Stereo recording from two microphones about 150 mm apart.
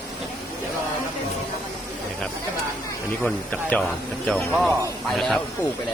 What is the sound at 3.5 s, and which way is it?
Speech, 5° left (ahead or behind).